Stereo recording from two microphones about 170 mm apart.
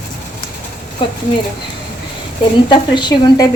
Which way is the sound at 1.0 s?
30° left (ahead or behind).